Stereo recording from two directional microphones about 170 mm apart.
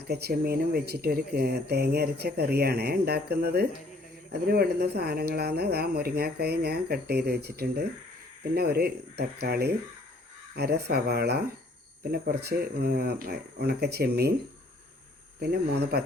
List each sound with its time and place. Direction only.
0.1 s speech: 70° right (ahead or behind)
15.4 s speech: 75° right (ahead or behind)